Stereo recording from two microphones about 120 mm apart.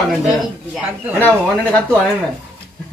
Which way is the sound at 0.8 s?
15° right (ahead or behind).